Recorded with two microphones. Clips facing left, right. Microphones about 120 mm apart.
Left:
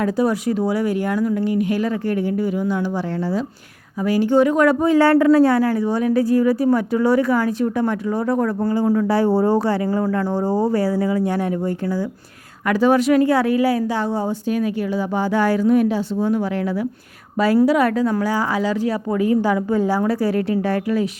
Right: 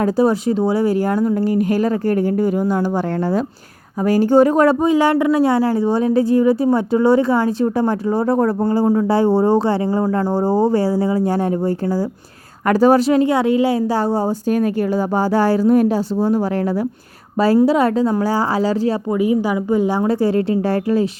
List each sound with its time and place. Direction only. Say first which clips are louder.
0.0 s a woman's voice: right 3 dB; 30° right (ahead or behind)
4.8 s a woman's voice: even; 15° right (ahead or behind); by 18.9 s 35° right (ahead or behind)
19.1 s a woman's voice: left 2 dB; 15° right (ahead or behind); by 21.1 s 30° right (ahead or behind)